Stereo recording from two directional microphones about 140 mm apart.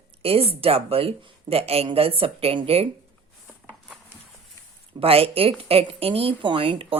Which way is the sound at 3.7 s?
Centre (ahead or behind).